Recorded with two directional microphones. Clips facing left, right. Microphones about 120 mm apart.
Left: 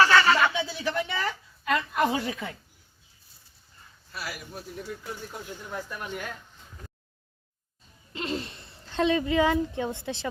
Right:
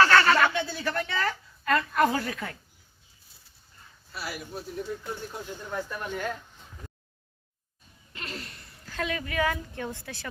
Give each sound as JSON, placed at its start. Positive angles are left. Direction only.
{"t": 0.0, "sound": "a sound", "side_deg": 10}
{"t": 4.2, "sound": "a man's voice", "side_deg": 0}
{"t": 5.7, "sound": "speech", "side_deg": 10}
{"t": 8.1, "sound": "speech", "side_deg": 25}